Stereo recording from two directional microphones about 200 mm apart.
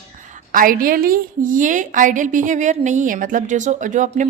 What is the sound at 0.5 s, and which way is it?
A woman's voice, 45° right (ahead or behind).